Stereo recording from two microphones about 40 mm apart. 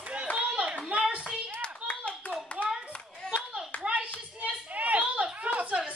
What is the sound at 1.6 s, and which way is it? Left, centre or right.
Clapping, left.